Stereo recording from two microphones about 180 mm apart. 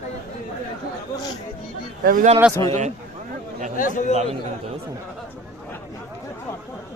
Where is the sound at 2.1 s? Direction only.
50° right (ahead or behind).